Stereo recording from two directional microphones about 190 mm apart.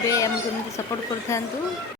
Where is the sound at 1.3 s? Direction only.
15° left (ahead or behind).